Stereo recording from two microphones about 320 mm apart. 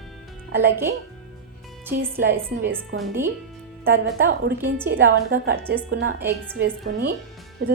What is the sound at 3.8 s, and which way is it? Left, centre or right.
A woman's voice, right.